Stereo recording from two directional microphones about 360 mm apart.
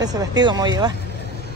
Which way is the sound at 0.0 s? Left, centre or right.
Centre.